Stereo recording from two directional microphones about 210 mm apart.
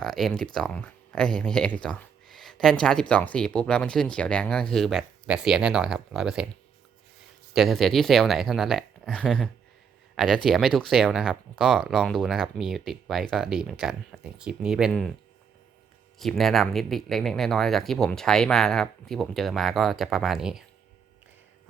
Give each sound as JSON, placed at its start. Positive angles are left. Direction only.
{"t": 0.0, "sound": "speech", "side_deg": 0}
{"t": 7.5, "sound": "speech", "side_deg": 0}
{"t": 16.1, "sound": "speech", "side_deg": 0}